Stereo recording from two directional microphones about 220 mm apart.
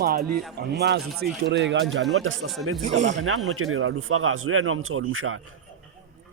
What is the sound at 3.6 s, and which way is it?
Speech, 70° right (ahead or behind).